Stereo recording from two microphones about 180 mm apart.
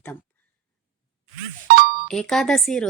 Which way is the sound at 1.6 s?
55° right (ahead or behind).